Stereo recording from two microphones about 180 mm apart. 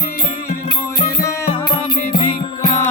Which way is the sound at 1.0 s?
15° left (ahead or behind).